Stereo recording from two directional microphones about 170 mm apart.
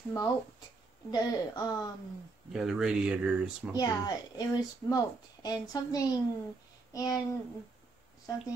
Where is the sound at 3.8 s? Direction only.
25° left (ahead or behind).